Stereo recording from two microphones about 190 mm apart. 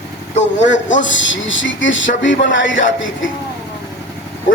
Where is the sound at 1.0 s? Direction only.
80° left.